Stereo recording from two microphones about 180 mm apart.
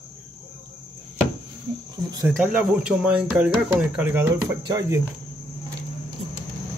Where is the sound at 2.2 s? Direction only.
5° right (ahead or behind).